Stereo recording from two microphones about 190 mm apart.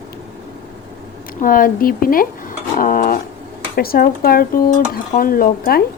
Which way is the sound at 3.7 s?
55° left (ahead or behind).